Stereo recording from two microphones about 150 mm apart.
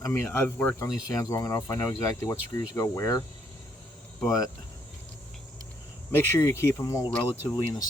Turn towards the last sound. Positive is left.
turn(degrees=30)  # may be behind; listen again after turning